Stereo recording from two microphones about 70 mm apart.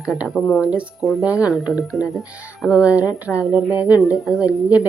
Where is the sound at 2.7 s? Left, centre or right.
Centre.